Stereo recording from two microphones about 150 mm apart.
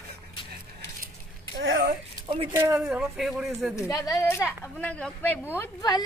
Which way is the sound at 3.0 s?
Centre (ahead or behind).